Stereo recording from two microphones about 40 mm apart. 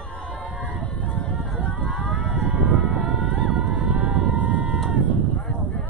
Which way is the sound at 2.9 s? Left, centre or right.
Right.